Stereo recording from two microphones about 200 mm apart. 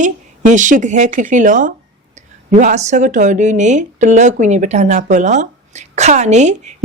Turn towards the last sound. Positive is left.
turn(degrees=-35)  # may be behind; listen again after turning